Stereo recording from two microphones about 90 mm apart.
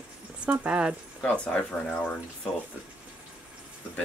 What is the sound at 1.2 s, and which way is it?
Speech, 10° left (ahead or behind).